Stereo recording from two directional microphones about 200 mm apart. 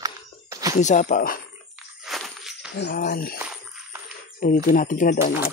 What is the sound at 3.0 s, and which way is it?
Speech, 45° left (ahead or behind).